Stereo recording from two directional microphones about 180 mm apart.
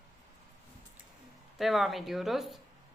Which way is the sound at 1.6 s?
Centre (ahead or behind).